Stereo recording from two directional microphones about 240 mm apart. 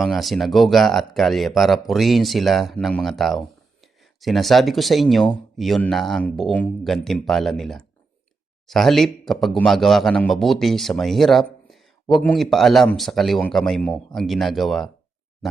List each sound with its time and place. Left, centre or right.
0.0 s a man's voice: centre